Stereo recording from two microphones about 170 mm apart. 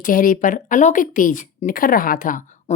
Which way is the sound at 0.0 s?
55° left (ahead or behind).